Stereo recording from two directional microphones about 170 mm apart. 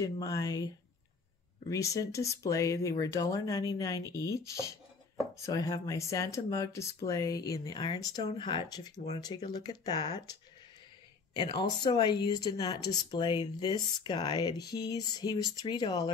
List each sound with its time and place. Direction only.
0.0 s speech: 20° left (ahead or behind)
1.7 s speech: 20° left (ahead or behind)
11.3 s speech: 25° left (ahead or behind)